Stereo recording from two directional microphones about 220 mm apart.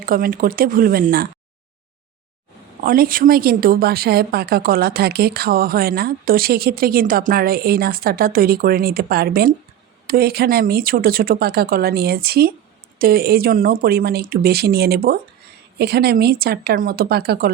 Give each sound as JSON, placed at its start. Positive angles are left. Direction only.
{"t": 0.0, "sound": "speech", "side_deg": -40}
{"t": 2.8, "sound": "speech", "side_deg": -40}